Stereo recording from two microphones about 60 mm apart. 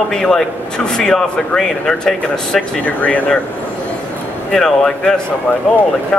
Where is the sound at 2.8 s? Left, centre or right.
Left.